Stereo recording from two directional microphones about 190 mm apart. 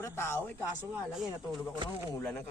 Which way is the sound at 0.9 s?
Centre (ahead or behind).